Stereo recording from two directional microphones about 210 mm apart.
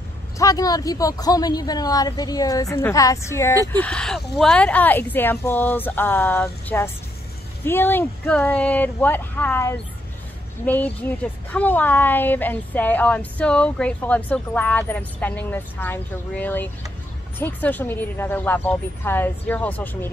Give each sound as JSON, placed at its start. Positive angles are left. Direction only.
{"t": 0.4, "sound": "speech", "side_deg": 15}